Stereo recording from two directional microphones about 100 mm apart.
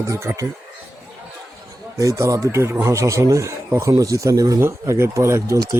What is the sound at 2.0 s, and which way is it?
Speech, 35° right (ahead or behind).